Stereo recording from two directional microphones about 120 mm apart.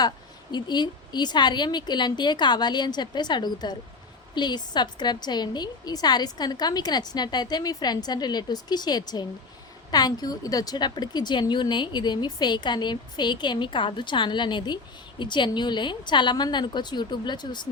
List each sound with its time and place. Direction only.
0.5 s a woman's voice: 35° left (ahead or behind)